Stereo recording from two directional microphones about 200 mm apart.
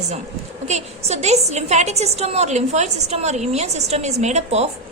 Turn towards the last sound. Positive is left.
turn(degrees=-35)  # may be behind; listen again after turning